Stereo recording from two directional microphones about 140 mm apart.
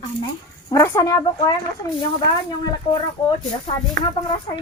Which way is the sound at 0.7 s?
20° left (ahead or behind).